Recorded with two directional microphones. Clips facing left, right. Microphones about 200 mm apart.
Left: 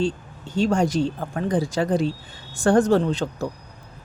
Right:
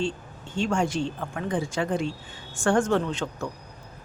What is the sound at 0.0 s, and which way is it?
Speech, 35° left (ahead or behind).